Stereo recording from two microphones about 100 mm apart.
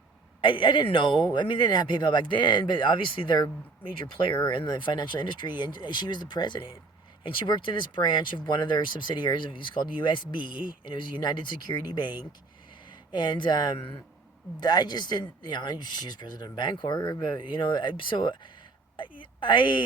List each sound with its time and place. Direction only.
0.4 s speech: 55° left (ahead or behind)